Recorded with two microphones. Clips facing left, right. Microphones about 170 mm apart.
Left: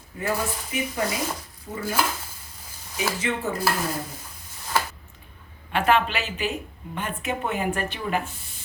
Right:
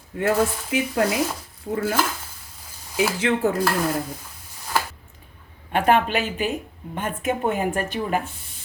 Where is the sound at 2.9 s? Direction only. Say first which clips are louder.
Right 6 dB; 90° right.